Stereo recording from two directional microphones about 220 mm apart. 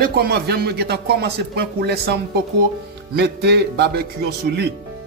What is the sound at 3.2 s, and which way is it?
Speech, 50° right (ahead or behind).